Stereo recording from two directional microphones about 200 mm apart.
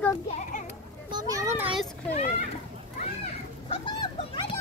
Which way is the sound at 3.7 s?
25° left (ahead or behind).